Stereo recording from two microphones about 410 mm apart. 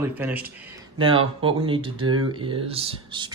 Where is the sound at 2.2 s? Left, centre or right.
Centre.